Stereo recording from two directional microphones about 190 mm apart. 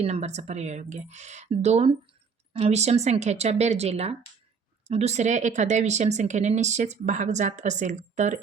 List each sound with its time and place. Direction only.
0.0 s speech: 35° right (ahead or behind)